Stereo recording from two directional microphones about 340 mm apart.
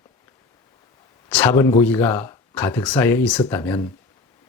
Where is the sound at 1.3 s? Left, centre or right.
Centre.